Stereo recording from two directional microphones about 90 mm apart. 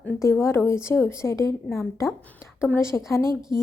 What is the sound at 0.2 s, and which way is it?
A woman's voice, 30° left (ahead or behind).